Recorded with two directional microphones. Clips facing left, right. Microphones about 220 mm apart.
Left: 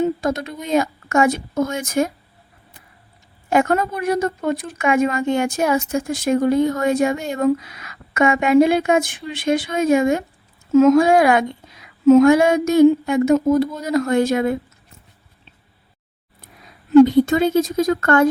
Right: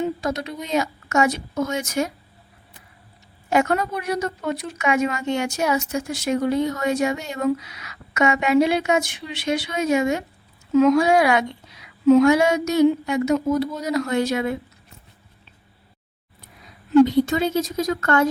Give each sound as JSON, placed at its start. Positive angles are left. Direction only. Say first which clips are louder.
{"t": 0.0, "sound": "a sound", "louder": "left 4 dB", "side_deg": 50}
{"t": 0.6, "sound": "speech", "louder": "left 6 dB", "side_deg": 50}
{"t": 3.5, "sound": "speech", "louder": "left 3 dB", "side_deg": 50}
{"t": 17.1, "sound": "speech", "louder": "left 4 dB", "side_deg": 50}